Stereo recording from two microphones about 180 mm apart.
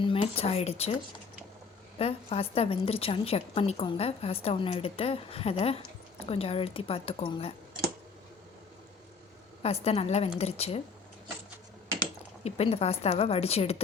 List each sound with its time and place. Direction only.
0.0 s a woman's voice: 30° left (ahead or behind)
2.0 s a woman's voice: 35° left (ahead or behind)
9.6 s a woman's voice: 35° left (ahead or behind)
12.4 s a woman's voice: 35° left (ahead or behind)